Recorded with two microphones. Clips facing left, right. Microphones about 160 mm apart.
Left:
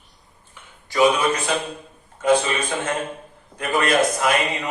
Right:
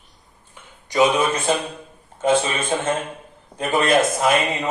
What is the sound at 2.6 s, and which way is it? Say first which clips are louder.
Speech: right 2 dB; 25° right (ahead or behind).